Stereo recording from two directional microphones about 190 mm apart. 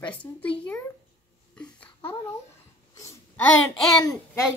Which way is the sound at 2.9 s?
15° left (ahead or behind).